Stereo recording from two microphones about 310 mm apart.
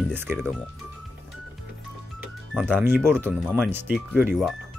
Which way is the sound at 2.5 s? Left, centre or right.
Centre.